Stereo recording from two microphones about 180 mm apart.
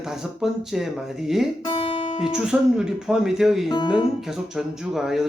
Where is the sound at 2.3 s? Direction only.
5° right (ahead or behind).